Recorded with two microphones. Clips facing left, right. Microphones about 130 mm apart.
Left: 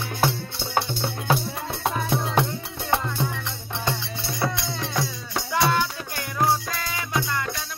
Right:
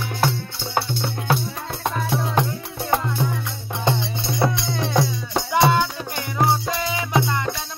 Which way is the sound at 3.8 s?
25° right (ahead or behind).